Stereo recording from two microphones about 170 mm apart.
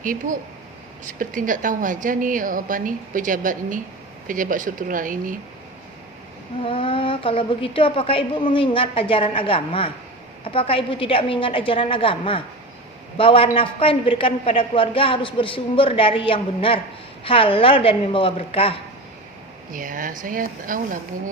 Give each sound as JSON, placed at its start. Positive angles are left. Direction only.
{"t": 0.0, "sound": "a woman's voice", "side_deg": -55}
{"t": 6.6, "sound": "a woman's voice", "side_deg": 30}
{"t": 19.7, "sound": "a woman's voice", "side_deg": -55}